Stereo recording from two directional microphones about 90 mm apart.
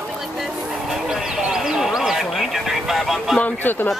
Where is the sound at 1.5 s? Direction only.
5° right (ahead or behind).